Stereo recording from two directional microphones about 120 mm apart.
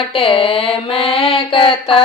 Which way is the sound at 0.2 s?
50° left (ahead or behind).